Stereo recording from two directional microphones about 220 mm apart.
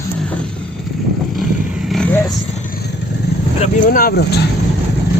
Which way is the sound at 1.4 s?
Centre (ahead or behind).